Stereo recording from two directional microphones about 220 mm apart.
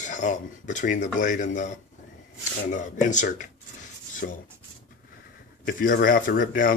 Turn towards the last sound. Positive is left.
turn(degrees=40)  # may be behind; listen again after turning